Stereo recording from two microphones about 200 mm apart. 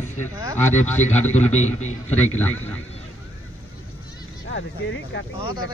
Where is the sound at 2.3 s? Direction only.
5° left (ahead or behind).